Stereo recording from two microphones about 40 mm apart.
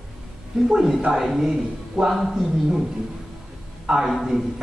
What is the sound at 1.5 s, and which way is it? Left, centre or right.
A man's voice, centre.